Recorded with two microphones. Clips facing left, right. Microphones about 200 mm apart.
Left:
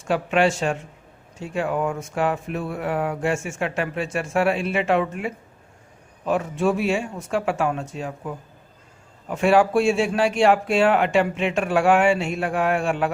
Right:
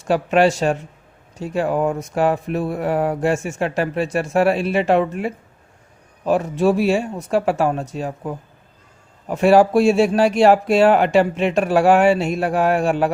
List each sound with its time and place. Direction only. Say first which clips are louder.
0.0 s speech: right 4 dB; 40° right (ahead or behind)
9.3 s speech: right 4 dB; 40° right (ahead or behind)